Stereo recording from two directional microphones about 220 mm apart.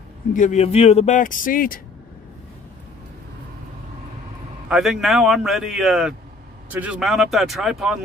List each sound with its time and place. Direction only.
0.3 s speech: 35° left (ahead or behind)
4.6 s speech: centre (ahead or behind)